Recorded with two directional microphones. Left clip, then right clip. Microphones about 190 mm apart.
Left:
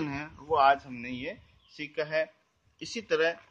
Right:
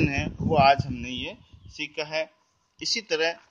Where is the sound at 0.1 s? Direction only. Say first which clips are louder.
Right 4 dB; 20° right (ahead or behind); by 3.3 s 5° right (ahead or behind).